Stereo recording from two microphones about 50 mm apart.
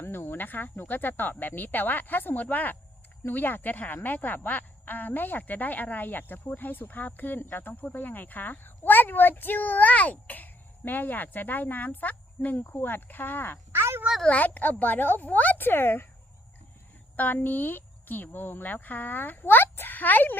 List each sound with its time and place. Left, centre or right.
0.0 s a woman's voice: left
12.5 s speech: left
14.3 s a woman's voice: left
17.2 s a woman's voice: left